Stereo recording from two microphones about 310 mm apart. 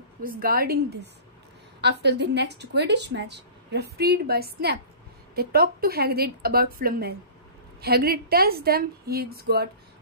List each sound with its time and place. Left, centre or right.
0.2 s a woman's voice: right